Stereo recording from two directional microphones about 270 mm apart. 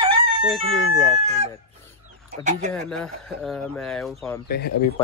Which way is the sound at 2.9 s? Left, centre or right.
Centre.